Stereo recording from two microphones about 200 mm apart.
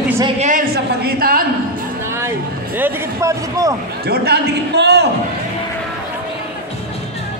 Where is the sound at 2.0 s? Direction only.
10° right (ahead or behind).